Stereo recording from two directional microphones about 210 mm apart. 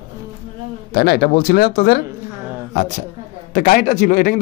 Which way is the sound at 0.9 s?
50° left (ahead or behind).